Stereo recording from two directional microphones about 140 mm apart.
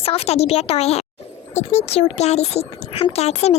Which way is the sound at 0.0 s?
45° left (ahead or behind).